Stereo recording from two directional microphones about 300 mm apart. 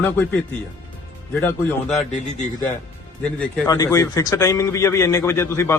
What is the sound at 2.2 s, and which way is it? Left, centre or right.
Speech, left.